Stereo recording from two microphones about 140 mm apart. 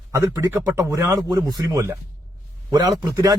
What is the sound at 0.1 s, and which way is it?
A man's voice, 15° right (ahead or behind).